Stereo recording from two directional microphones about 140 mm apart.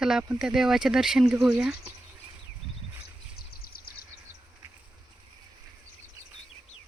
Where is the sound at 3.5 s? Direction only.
90° left.